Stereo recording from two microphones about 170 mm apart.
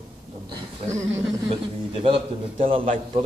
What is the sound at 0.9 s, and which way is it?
Speech, 15° right (ahead or behind).